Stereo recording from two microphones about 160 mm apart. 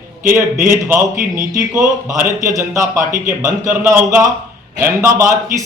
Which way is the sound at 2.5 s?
20° right (ahead or behind).